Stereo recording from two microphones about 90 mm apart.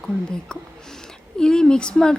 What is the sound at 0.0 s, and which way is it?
A woman's voice, 10° left (ahead or behind).